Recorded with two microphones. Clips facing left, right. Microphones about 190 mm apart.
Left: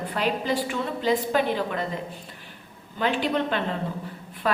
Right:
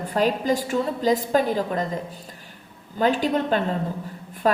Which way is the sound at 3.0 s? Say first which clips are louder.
Right 3 dB; 40° right (ahead or behind).